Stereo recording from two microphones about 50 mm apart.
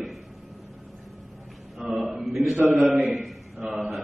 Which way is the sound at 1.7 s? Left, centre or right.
Centre.